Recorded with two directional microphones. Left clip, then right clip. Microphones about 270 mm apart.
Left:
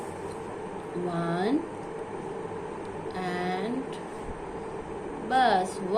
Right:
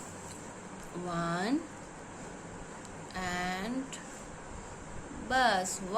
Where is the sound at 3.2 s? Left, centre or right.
Right.